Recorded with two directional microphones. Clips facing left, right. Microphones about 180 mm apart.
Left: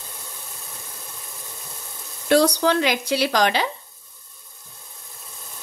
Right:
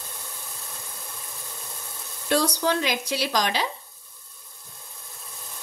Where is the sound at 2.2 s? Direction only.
70° left (ahead or behind).